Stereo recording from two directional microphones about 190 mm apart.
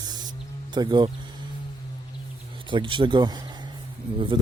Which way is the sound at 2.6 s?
25° right (ahead or behind).